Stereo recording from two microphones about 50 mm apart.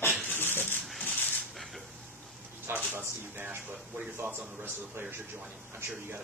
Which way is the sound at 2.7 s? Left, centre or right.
Right.